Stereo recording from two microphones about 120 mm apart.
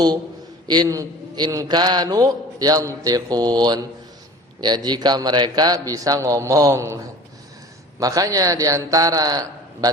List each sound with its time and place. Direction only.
0.7 s a man's voice: 30° right (ahead or behind)